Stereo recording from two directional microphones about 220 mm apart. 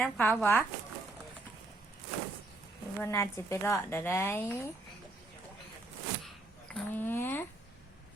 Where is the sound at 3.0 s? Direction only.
15° left (ahead or behind).